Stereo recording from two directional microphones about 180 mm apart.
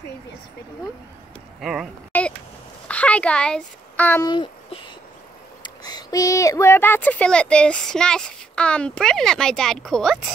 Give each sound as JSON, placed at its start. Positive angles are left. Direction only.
{"t": 1.6, "sound": "speech", "side_deg": -5}
{"t": 2.1, "sound": "a sound", "side_deg": 10}
{"t": 2.9, "sound": "a child's voice", "side_deg": 5}
{"t": 4.3, "sound": "speech", "side_deg": 30}